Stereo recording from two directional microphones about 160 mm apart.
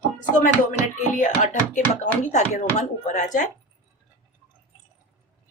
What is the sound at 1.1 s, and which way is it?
Speech, 50° left (ahead or behind).